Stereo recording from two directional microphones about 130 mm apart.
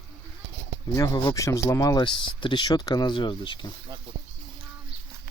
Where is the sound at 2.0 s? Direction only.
40° left (ahead or behind).